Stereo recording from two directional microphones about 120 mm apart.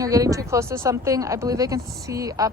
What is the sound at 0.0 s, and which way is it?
A woman's voice, 30° right (ahead or behind).